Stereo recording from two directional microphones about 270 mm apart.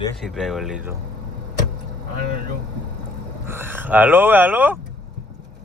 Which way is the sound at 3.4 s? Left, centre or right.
Centre.